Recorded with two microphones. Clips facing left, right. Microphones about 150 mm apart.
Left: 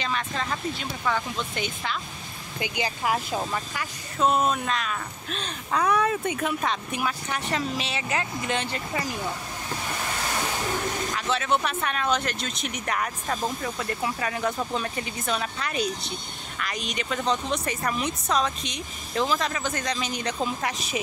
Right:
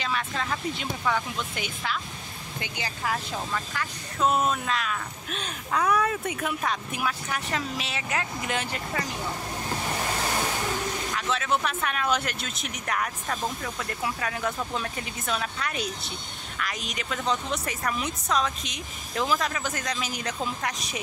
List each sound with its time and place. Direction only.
0.0 s speech: 5° right (ahead or behind)
2.6 s speech: 15° left (ahead or behind)
4.2 s speech: 5° right (ahead or behind)
11.1 s speech: centre (ahead or behind)